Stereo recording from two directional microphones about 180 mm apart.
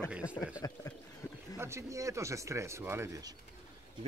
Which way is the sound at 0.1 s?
5° right (ahead or behind).